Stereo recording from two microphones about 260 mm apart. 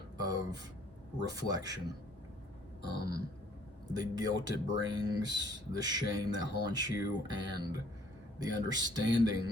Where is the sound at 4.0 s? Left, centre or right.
Centre.